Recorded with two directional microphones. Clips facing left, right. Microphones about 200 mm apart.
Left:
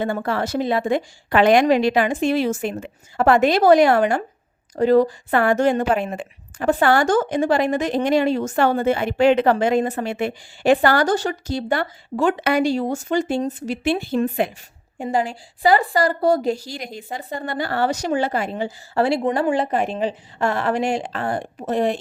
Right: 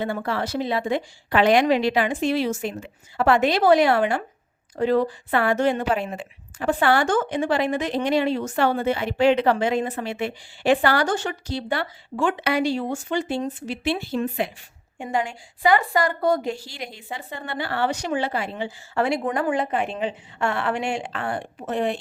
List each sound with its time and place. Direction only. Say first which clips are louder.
0.0 s a woman's voice: left 3 dB; 50° left (ahead or behind)
14.9 s a woman's voice: left 4 dB; 35° left (ahead or behind)